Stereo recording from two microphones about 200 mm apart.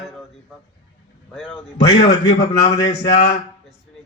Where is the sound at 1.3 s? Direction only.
Centre (ahead or behind).